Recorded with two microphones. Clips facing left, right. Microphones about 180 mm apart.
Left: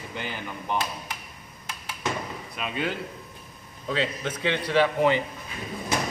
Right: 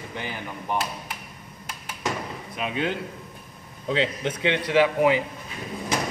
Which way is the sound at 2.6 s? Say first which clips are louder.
Right 2 dB; 20° right (ahead or behind).